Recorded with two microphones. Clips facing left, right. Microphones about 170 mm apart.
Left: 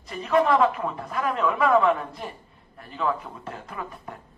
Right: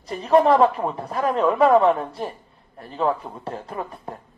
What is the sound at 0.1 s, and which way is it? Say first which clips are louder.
Speech: right 5 dB; 35° right (ahead or behind).